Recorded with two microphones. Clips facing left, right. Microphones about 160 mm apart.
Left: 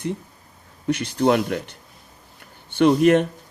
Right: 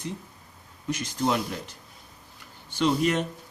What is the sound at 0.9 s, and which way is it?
Speech, 65° left (ahead or behind).